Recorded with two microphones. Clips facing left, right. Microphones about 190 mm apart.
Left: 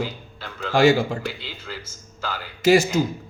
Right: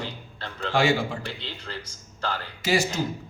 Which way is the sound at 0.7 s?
40° left (ahead or behind).